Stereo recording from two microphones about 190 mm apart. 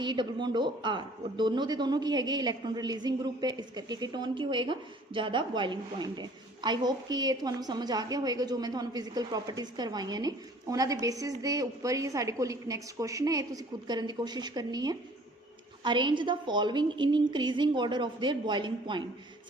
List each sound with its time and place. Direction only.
0.0 s a man's voice: 25° right (ahead or behind)